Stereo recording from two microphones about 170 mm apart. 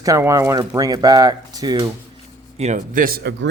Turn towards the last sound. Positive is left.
turn(degrees=-75)  # may be behind; listen again after turning